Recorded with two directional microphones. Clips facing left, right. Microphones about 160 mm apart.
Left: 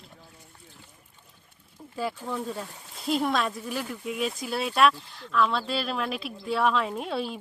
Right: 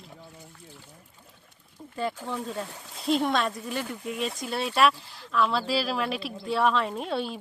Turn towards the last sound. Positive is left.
turn(degrees=0)  # may be behind; listen again after turning